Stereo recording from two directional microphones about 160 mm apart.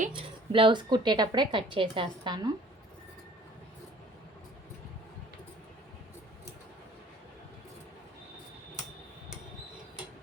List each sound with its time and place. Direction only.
0.1 s a woman's voice: 30° right (ahead or behind)